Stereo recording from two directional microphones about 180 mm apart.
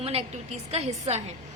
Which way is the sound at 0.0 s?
35° right (ahead or behind).